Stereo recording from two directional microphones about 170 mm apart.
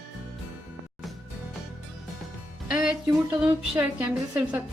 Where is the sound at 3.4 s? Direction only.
10° right (ahead or behind).